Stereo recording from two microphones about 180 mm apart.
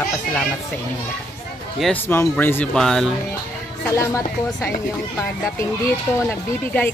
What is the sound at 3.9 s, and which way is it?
Speech, 15° left (ahead or behind).